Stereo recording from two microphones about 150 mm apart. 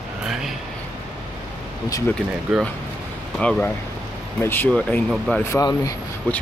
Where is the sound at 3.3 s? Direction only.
5° left (ahead or behind); by 5.9 s 20° left (ahead or behind).